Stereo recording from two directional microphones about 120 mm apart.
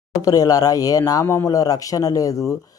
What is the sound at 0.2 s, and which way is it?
Speech, 30° left (ahead or behind).